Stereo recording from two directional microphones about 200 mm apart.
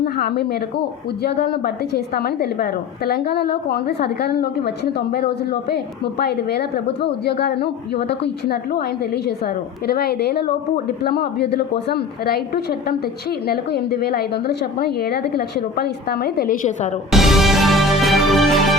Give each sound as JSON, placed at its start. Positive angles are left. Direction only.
{"t": 0.0, "sound": "a woman's voice", "side_deg": 50}
{"t": 9.8, "sound": "a woman's voice", "side_deg": 50}
{"t": 17.1, "sound": "music", "side_deg": 0}